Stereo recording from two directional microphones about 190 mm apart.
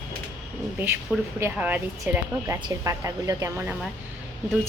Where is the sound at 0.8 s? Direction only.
10° right (ahead or behind).